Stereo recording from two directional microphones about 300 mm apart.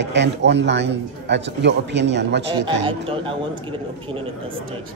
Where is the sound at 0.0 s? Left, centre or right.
Right.